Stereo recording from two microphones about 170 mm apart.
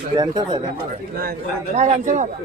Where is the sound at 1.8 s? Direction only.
45° right (ahead or behind).